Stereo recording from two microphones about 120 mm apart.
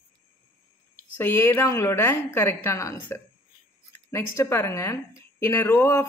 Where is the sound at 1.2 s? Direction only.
20° left (ahead or behind).